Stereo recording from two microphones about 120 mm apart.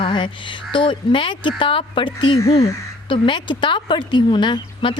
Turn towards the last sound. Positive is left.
turn(degrees=40)  # may be behind; listen again after turning